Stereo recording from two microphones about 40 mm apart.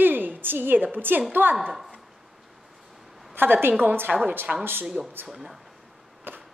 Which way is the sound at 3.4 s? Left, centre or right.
Right.